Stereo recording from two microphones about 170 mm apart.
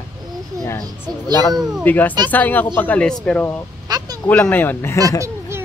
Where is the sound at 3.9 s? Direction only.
25° right (ahead or behind).